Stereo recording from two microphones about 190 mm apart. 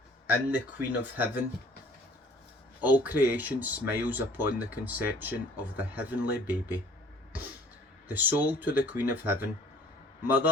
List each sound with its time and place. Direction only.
0.3 s speech: 10° right (ahead or behind)
2.8 s speech: 10° right (ahead or behind)
8.0 s speech: 10° right (ahead or behind)